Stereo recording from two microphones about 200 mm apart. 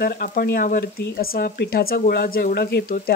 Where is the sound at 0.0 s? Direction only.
50° left (ahead or behind).